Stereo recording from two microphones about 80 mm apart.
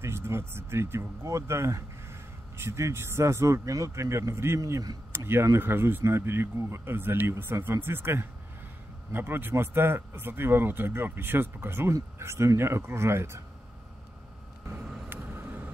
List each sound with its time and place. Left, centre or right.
0.0 s speech: right
15.0 s vehicle: right